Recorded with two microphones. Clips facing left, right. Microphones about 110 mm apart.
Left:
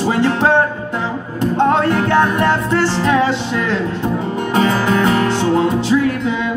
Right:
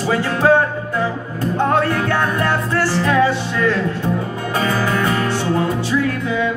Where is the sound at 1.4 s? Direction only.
20° left (ahead or behind).